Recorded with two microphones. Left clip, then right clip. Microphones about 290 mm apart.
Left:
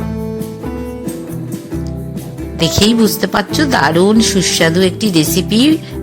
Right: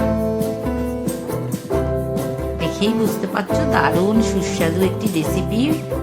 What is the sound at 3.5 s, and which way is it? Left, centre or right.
Speech, left.